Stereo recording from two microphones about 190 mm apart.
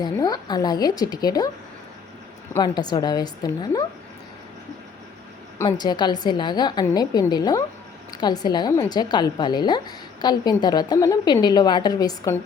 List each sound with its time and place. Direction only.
0.0 s a woman's voice: 20° left (ahead or behind)
2.6 s a woman's voice: 20° left (ahead or behind)
5.6 s a woman's voice: 20° left (ahead or behind)